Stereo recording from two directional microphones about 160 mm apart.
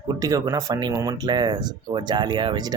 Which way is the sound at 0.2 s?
20° right (ahead or behind).